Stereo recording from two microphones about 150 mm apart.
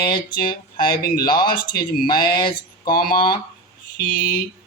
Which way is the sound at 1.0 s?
75° left (ahead or behind).